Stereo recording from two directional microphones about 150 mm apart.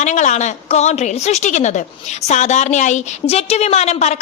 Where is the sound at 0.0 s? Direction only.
50° left (ahead or behind).